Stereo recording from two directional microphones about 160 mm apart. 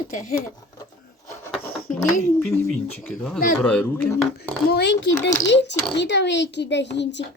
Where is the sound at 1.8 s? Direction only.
60° left (ahead or behind).